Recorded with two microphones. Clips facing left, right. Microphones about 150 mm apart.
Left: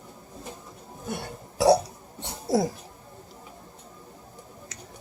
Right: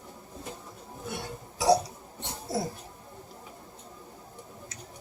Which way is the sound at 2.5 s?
90° left.